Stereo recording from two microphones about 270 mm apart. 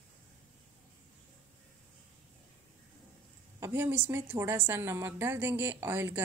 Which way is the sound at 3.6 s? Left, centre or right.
Centre.